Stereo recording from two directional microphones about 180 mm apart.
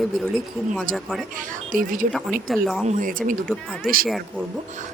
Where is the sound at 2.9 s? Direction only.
50° right (ahead or behind).